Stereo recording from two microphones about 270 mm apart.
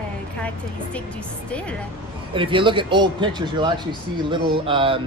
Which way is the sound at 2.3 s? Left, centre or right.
Centre.